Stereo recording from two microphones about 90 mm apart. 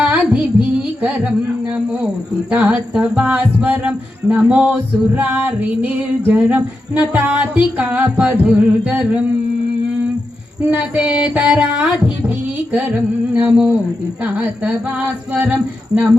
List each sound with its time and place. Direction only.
0.0 s music: 10° right (ahead or behind)
2.5 s music: 10° right (ahead or behind)
10.7 s music: 15° right (ahead or behind)